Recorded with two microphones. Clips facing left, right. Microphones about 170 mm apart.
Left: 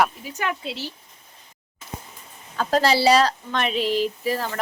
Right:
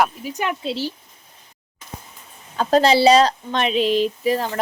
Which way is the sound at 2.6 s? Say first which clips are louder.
Right 5 dB; 25° right (ahead or behind).